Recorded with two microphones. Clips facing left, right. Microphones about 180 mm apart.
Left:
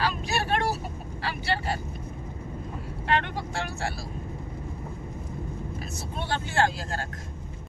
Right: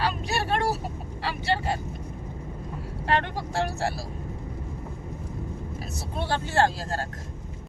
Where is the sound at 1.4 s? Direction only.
20° right (ahead or behind).